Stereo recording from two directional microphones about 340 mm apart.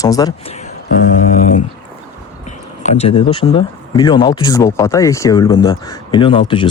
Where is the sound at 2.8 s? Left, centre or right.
Centre.